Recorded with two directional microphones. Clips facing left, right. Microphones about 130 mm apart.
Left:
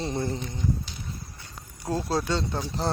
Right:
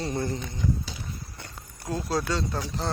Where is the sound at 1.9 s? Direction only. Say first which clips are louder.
Left 1 dB; 30° left (ahead or behind).